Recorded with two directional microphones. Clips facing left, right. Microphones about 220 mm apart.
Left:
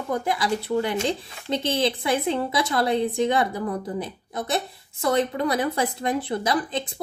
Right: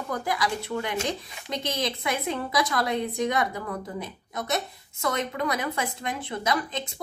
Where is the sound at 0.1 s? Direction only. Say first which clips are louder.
Left 4 dB; 25° left (ahead or behind).